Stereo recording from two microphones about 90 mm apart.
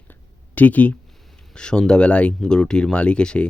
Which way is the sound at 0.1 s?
20° left (ahead or behind).